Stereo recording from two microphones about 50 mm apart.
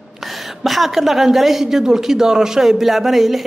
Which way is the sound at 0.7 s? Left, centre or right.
Centre.